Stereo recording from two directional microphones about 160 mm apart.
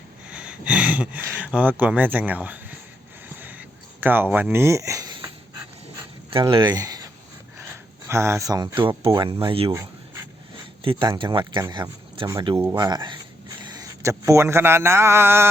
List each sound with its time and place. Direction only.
0.3 s speech: 5° right (ahead or behind)
3.3 s a sound: 10° right (ahead or behind); by 5.3 s 25° right (ahead or behind)
6.3 s speech: 30° right (ahead or behind)
10.8 s a man's voice: 35° right (ahead or behind); by 15.4 s 15° right (ahead or behind)